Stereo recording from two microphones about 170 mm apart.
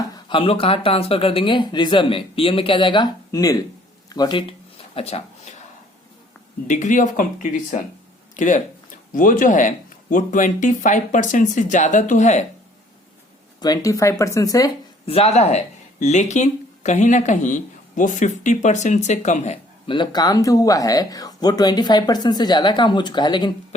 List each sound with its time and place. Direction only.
0.3 s speech: 30° left (ahead or behind)
6.7 s speech: 45° left (ahead or behind)
13.6 s speech: 20° left (ahead or behind)
15.0 s speech: 35° left (ahead or behind)
19.9 s speech: 25° left (ahead or behind)